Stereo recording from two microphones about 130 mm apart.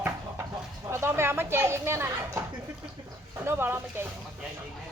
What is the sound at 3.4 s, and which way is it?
Speech, 15° right (ahead or behind).